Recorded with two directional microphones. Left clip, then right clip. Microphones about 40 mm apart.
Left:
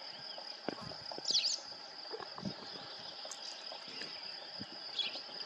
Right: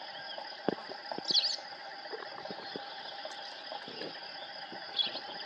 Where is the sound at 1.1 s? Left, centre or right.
Left.